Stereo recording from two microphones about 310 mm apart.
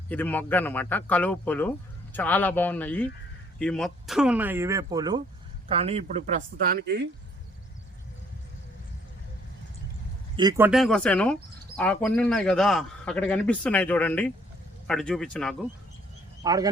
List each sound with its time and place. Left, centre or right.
0.1 s a man's voice: centre; by 7.1 s right
10.3 s speech: centre
10.7 s a man's voice: centre
16.4 s speech: centre